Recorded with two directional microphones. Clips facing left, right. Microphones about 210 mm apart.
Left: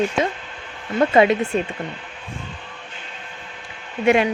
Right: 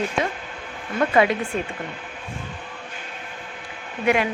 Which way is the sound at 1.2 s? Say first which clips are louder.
Left 4 dB; 25° left (ahead or behind).